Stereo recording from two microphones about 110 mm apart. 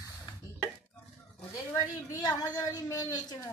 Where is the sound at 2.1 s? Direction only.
35° left (ahead or behind).